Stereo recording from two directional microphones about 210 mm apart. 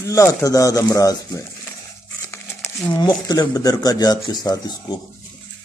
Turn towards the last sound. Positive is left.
turn(degrees=20)  # may be behind; listen again after turning